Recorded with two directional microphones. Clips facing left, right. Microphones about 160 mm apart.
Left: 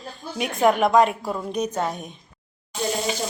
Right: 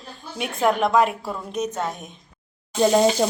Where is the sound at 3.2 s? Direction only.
90° right.